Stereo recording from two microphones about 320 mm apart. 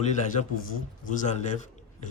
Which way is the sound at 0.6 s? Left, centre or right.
Left.